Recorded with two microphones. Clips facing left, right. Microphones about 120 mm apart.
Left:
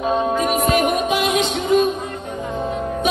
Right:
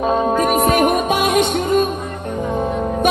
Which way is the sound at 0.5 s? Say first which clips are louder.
Right 3 dB; 50° right (ahead or behind).